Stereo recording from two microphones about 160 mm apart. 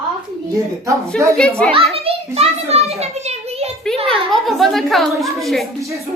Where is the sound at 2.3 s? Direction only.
40° right (ahead or behind).